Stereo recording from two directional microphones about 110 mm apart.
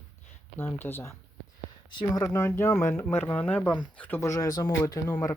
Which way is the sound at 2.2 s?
25° left (ahead or behind).